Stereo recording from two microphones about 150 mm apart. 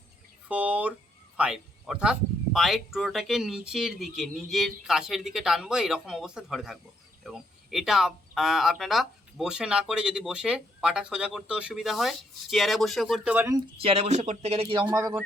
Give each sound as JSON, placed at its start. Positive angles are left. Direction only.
{"t": 0.4, "sound": "speech", "side_deg": -10}
{"t": 13.7, "sound": "speech", "side_deg": -40}
{"t": 14.9, "sound": "speech", "side_deg": -25}